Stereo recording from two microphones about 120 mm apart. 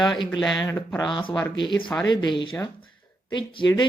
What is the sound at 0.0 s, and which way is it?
Speech, 40° left (ahead or behind).